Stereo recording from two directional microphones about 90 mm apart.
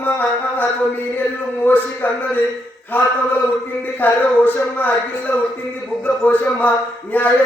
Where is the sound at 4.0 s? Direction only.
20° left (ahead or behind).